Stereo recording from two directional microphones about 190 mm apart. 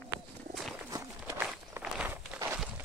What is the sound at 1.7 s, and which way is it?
Walk, 10° right (ahead or behind).